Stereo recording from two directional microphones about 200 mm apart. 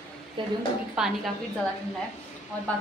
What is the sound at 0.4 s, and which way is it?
Speech, 25° right (ahead or behind).